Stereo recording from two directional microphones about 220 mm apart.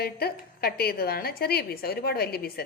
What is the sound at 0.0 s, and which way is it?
A woman's voice, 45° left (ahead or behind).